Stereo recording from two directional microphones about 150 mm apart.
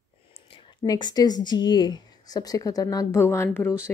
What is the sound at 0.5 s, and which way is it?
A woman's voice, 30° left (ahead or behind).